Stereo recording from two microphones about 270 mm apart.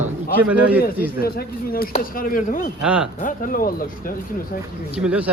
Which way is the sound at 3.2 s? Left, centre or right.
Left.